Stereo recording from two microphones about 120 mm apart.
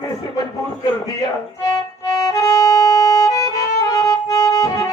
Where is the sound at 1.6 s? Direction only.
30° left (ahead or behind).